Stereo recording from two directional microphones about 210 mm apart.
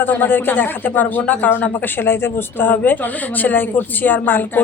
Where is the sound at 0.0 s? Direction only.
10° left (ahead or behind).